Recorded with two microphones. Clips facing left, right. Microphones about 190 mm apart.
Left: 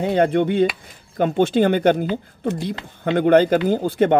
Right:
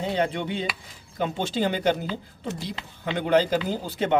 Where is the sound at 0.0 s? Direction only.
55° left (ahead or behind).